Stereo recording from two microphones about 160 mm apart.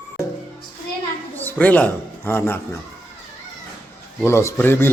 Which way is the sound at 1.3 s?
10° left (ahead or behind).